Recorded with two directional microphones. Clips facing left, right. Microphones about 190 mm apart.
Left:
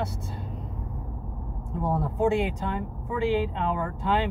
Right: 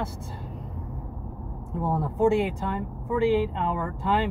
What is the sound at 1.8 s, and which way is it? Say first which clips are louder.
Speech: right 2 dB; 10° left (ahead or behind).